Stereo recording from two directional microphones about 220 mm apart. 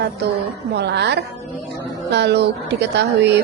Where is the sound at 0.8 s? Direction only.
50° right (ahead or behind).